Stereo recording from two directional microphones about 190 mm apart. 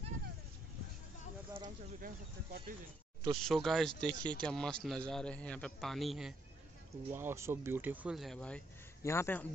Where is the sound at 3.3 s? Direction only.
Centre (ahead or behind).